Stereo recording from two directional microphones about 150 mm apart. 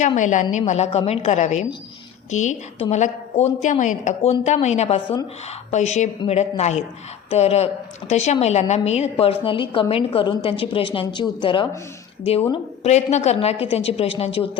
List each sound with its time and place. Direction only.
0.2 s a woman's voice: 55° left (ahead or behind); by 11.7 s 30° left (ahead or behind)
12.8 s a woman's voice: 50° left (ahead or behind)